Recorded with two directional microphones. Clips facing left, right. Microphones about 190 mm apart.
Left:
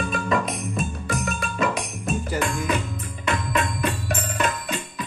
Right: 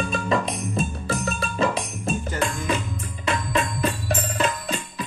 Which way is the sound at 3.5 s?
30° right (ahead or behind).